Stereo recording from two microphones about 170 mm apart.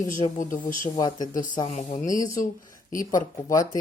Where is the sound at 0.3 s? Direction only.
50° left (ahead or behind).